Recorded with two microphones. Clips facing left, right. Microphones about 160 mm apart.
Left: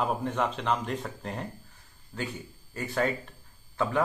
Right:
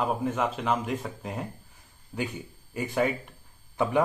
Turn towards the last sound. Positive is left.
turn(degrees=-15)  # may be behind; listen again after turning